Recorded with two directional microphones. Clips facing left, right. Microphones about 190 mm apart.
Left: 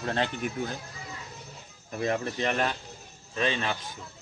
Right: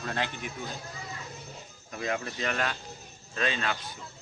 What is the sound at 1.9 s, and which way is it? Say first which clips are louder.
Speech: left 4 dB; 35° left (ahead or behind).